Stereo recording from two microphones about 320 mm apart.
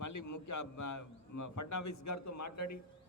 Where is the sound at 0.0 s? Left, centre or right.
Left.